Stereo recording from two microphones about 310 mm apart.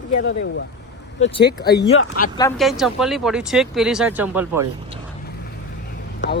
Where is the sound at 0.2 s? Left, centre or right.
Left.